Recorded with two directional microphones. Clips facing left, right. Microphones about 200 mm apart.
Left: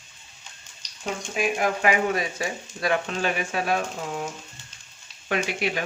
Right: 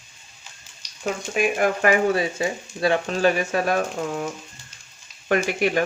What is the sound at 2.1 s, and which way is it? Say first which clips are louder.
Speech: right 4 dB; 30° right (ahead or behind).